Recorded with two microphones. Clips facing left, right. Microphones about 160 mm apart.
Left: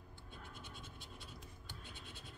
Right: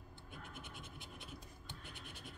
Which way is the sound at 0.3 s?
15° right (ahead or behind).